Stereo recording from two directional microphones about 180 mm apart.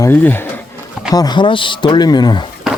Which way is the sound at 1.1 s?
25° left (ahead or behind).